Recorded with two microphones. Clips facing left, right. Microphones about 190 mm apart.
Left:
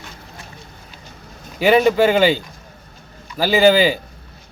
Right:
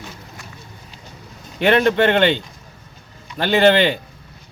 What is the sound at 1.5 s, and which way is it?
Speech, 5° left (ahead or behind).